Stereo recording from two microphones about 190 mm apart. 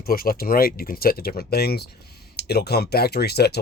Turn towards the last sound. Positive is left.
turn(degrees=55)  # may be behind; listen again after turning